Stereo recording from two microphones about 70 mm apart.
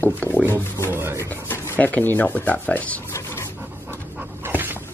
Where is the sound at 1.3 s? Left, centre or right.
Left.